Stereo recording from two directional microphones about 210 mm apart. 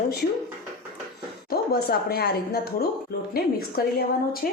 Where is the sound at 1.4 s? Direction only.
45° left (ahead or behind).